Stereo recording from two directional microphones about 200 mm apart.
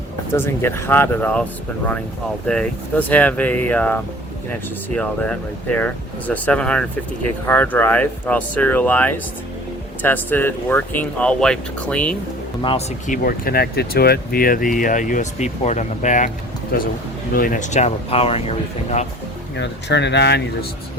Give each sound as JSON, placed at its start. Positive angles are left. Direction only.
{"t": 0.3, "sound": "speech", "side_deg": 10}
{"t": 2.5, "sound": "speech", "side_deg": 5}
{"t": 13.1, "sound": "speech", "side_deg": 45}
{"t": 19.5, "sound": "speech", "side_deg": 60}